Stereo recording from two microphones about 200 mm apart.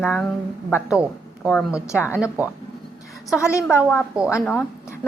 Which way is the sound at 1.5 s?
Centre (ahead or behind).